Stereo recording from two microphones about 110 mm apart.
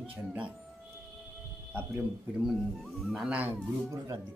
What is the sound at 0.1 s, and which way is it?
Speech, 15° right (ahead or behind).